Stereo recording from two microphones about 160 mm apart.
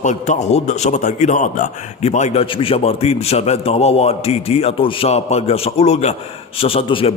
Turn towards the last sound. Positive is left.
turn(degrees=35)  # may be behind; listen again after turning